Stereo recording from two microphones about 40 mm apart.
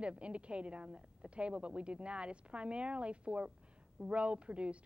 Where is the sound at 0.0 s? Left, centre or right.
Right.